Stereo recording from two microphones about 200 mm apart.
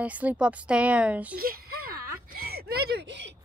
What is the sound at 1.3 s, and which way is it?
Whimper, 50° right (ahead or behind).